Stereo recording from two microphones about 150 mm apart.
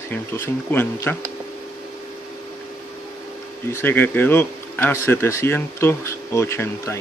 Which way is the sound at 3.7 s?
15° left (ahead or behind).